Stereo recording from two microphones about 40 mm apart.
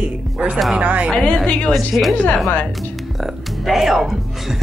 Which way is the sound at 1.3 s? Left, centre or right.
Left.